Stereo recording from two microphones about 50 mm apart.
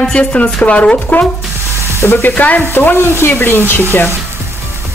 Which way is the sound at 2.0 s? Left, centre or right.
Left.